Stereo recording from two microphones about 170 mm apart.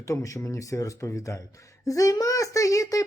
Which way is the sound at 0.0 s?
20° left (ahead or behind).